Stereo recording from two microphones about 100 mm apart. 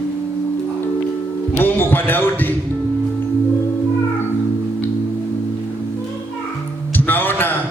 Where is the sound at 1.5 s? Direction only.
20° left (ahead or behind).